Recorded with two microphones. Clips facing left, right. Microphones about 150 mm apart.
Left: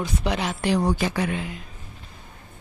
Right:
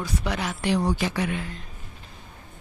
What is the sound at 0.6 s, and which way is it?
Speech, 40° left (ahead or behind).